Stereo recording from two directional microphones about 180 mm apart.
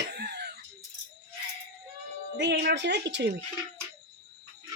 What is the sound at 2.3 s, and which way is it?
Speech, 70° right (ahead or behind).